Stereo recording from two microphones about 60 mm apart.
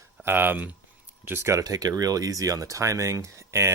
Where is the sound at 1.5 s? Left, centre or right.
Right.